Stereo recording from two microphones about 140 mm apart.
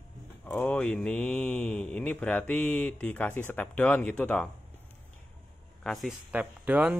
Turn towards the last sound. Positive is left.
turn(degrees=-10)  # may be behind; listen again after turning